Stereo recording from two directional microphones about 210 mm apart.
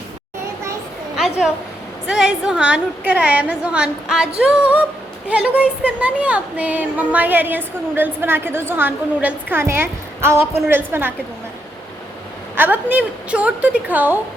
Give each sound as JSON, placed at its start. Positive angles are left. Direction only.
{"t": 1.1, "sound": "a sound", "side_deg": 0}
{"t": 2.0, "sound": "a woman's voice", "side_deg": -5}
{"t": 12.5, "sound": "speech", "side_deg": -10}